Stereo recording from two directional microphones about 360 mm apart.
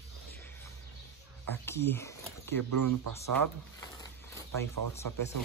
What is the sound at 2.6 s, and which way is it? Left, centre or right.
Speech, right.